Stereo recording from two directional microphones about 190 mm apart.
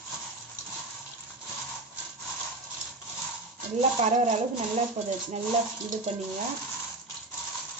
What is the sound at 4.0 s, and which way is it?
Speech, 35° right (ahead or behind).